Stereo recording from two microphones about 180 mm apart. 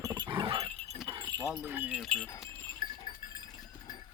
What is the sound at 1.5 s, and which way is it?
Speech, 5° right (ahead or behind).